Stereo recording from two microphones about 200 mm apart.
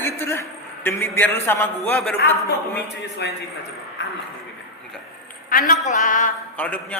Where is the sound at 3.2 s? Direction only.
60° left (ahead or behind).